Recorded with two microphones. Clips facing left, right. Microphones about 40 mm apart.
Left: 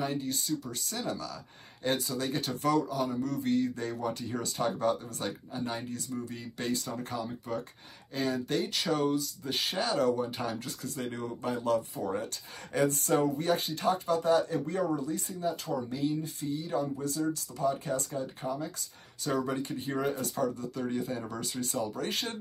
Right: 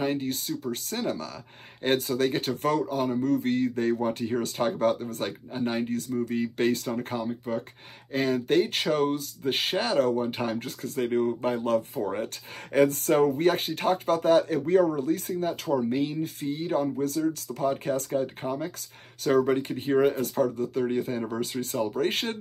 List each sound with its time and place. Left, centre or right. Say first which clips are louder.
0.0 s speech: right 5 dB; right